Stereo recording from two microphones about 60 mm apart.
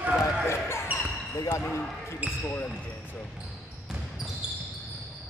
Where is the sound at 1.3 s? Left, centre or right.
Left.